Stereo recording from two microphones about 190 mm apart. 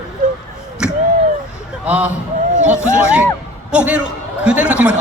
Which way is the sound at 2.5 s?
40° right (ahead or behind).